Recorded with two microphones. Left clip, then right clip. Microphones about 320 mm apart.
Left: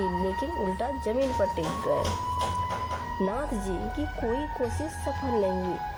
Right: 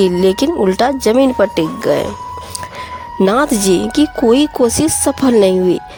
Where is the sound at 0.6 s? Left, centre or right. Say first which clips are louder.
Right 17 dB; right.